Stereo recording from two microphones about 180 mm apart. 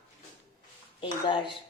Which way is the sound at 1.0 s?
30° left (ahead or behind).